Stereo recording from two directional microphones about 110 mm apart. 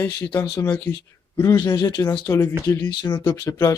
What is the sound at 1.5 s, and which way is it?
Speech, 40° left (ahead or behind).